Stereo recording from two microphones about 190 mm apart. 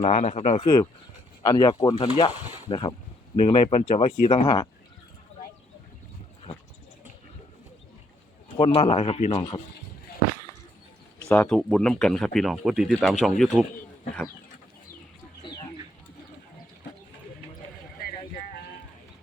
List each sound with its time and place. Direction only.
0.0 s speech: 35° left (ahead or behind); by 4.7 s 20° left (ahead or behind)
8.5 s speech: 30° left (ahead or behind)
11.3 s speech: 5° left (ahead or behind)